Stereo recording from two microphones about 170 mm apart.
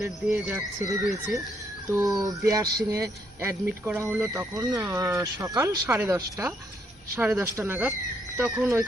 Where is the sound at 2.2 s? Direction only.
20° right (ahead or behind).